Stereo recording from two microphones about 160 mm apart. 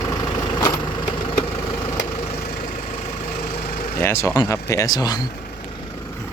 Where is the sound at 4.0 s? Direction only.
15° left (ahead or behind).